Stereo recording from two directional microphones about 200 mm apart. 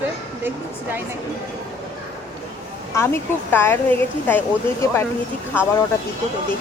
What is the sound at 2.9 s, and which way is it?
A woman's voice, 10° left (ahead or behind).